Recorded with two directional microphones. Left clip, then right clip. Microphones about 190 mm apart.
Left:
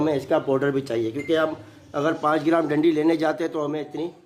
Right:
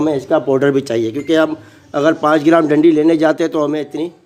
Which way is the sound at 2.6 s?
25° right (ahead or behind).